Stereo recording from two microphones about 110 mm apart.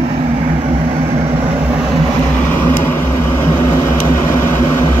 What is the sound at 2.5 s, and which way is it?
Vehicle, 15° left (ahead or behind).